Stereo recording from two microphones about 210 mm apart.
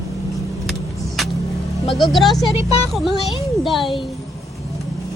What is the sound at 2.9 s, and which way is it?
Speech, centre (ahead or behind).